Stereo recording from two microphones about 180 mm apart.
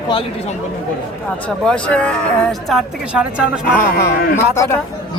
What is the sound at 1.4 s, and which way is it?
Speech, 5° left (ahead or behind).